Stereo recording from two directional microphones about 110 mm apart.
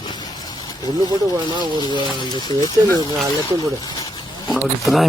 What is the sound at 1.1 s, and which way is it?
Speech, 40° right (ahead or behind).